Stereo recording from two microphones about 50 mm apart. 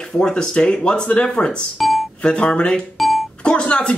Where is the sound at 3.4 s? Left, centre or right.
Left.